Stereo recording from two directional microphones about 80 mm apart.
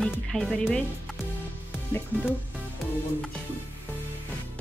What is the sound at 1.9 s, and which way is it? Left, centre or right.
Speech, left.